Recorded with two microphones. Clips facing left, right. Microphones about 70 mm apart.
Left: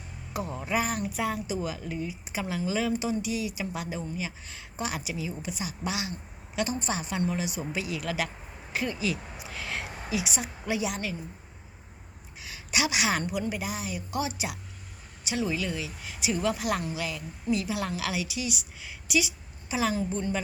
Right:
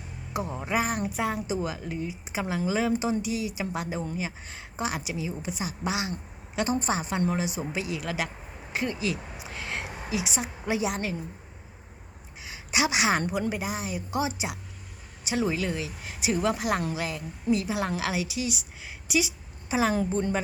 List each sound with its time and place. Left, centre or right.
0.3 s a woman's voice: centre
12.4 s a woman's voice: right
15.3 s a woman's voice: right
19.9 s a woman's voice: right